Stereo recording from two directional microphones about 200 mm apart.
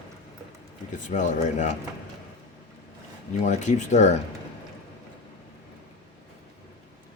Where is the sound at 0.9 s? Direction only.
40° left (ahead or behind).